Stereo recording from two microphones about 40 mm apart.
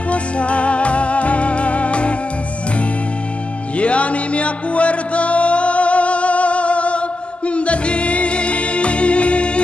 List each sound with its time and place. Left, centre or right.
0.1 s music: left
3.7 s music: left